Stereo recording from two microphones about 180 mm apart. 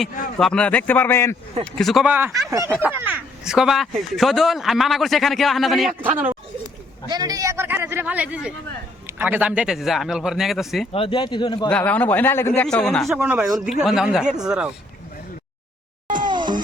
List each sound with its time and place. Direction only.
0.3 s a man's voice: 5° left (ahead or behind)
1.6 s speech: centre (ahead or behind)
2.5 s speech: 15° right (ahead or behind)
2.8 s speech: 5° right (ahead or behind)
7.1 s speech: 20° right (ahead or behind); by 10.8 s centre (ahead or behind)
10.9 s speech: 30° left (ahead or behind)
11.7 s a man's voice: 10° left (ahead or behind)
12.6 s speech: 5° left (ahead or behind)
13.1 s speech: 10° right (ahead or behind)
16.0 s music: 50° right (ahead or behind)
16.3 s music: 25° right (ahead or behind)